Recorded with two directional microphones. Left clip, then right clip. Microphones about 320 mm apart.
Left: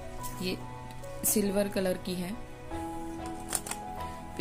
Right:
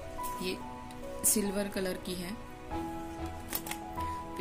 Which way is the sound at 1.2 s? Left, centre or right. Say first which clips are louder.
Left 4 dB; centre.